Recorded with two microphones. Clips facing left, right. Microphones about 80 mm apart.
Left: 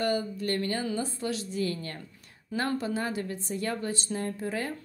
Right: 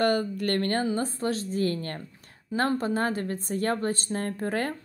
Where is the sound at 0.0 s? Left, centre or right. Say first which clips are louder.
Right 4 dB; right.